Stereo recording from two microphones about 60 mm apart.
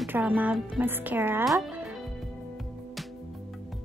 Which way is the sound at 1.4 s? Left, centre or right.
Centre.